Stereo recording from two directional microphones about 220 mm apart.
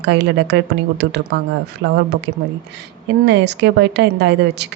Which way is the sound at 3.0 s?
50° right (ahead or behind).